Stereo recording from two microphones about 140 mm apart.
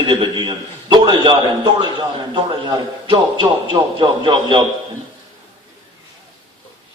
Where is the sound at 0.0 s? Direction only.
35° right (ahead or behind).